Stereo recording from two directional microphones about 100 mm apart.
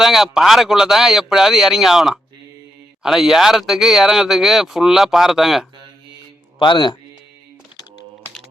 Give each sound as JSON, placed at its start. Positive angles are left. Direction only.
{"t": 0.0, "sound": "speech", "side_deg": -5}
{"t": 6.6, "sound": "speech", "side_deg": 55}